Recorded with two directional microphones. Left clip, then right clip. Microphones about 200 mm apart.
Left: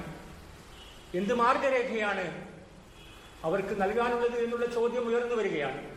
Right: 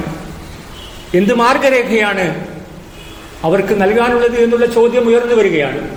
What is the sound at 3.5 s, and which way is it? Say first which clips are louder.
A man's voice: right 17 dB; 40° right (ahead or behind).